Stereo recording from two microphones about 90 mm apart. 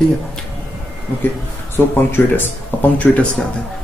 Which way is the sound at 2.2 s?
20° left (ahead or behind).